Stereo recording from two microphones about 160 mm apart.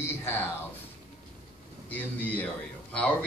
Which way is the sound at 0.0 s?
15° left (ahead or behind).